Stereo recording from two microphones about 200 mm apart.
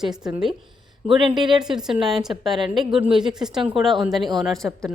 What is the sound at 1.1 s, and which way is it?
Speech, 25° right (ahead or behind).